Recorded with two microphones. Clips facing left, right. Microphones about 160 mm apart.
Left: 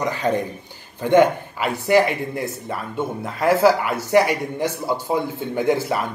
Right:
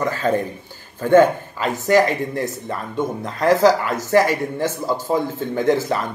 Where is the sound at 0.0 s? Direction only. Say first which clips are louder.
Right 2 dB; 15° left (ahead or behind).